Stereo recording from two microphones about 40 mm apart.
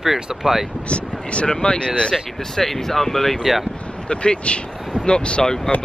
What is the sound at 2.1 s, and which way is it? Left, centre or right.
Speech, centre.